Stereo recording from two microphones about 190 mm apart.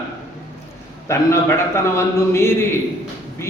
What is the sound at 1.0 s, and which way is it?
A man's voice, 15° left (ahead or behind).